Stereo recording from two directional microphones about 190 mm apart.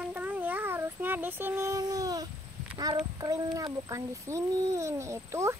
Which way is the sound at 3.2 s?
15° right (ahead or behind).